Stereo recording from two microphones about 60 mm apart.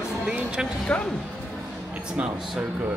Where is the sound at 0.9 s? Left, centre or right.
Left.